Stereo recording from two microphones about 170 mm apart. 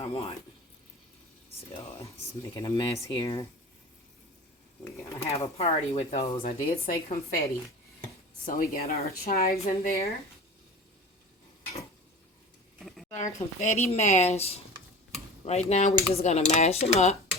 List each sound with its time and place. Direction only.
0.0 s speech: 35° left (ahead or behind)
2.4 s speech: 20° left (ahead or behind)
5.3 s speech: 35° left (ahead or behind)
6.4 s speech: 55° left (ahead or behind)
8.4 s speech: 55° left (ahead or behind)
13.1 s speech: 45° left (ahead or behind)